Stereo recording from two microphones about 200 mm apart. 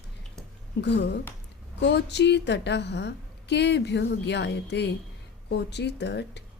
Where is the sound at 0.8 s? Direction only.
60° left (ahead or behind).